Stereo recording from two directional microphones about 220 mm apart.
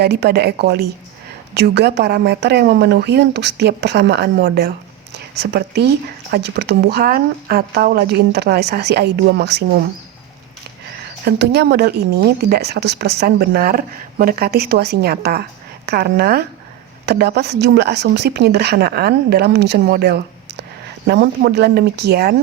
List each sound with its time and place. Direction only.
0.0 s speech: 50° right (ahead or behind)
11.3 s speech: 50° right (ahead or behind)